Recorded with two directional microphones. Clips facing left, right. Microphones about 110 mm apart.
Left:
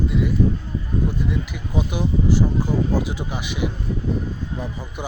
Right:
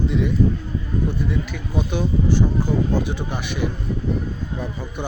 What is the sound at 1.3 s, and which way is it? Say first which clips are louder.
Speech: right 1 dB; 15° left (ahead or behind).